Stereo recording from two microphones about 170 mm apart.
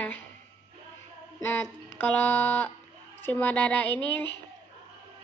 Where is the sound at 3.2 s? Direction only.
10° left (ahead or behind).